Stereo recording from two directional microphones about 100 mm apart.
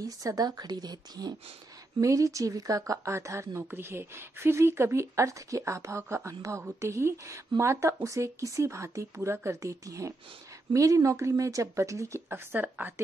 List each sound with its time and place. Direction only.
0.0 s speech: 35° right (ahead or behind)
12.5 s a woman's voice: 15° right (ahead or behind)